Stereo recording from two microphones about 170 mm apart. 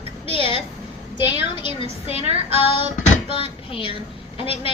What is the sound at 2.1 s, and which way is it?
Child singing, 40° right (ahead or behind).